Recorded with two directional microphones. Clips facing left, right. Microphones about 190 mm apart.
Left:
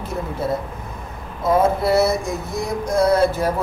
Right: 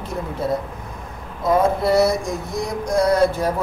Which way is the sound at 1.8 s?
5° left (ahead or behind).